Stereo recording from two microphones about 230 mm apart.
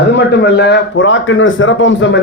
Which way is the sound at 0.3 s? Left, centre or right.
Left.